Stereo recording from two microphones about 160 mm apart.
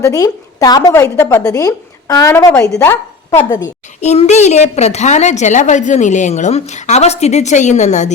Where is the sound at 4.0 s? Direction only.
45° left (ahead or behind).